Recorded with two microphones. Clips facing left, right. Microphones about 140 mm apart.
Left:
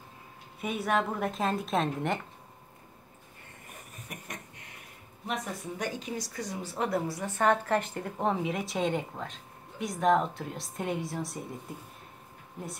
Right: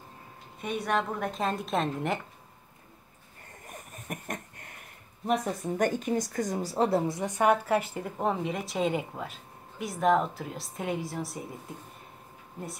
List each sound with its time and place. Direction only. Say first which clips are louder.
0.6 s a woman's voice: even; 5° left (ahead or behind)
3.6 s a sound: right 6 dB; 50° right (ahead or behind)
5.2 s a woman's voice: right 7 dB; 40° right (ahead or behind)
7.1 s a woman's voice: right 2 dB; 20° right (ahead or behind); by 11.4 s centre (ahead or behind)